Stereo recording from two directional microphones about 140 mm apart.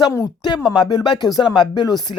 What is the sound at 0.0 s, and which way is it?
Speech, 20° left (ahead or behind).